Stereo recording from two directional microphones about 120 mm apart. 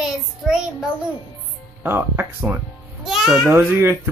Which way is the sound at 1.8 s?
20° right (ahead or behind).